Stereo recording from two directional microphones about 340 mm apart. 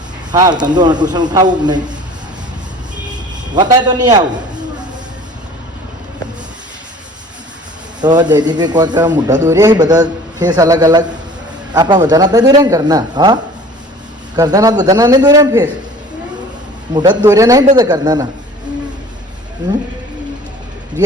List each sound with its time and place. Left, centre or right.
0.3 s speech: centre
3.1 s a sound: centre
8.0 s speech: centre
16.9 s speech: centre